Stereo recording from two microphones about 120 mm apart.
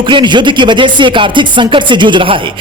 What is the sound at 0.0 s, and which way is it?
A man's voice, 40° right (ahead or behind).